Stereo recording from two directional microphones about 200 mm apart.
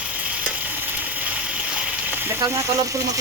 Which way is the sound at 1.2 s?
5° right (ahead or behind).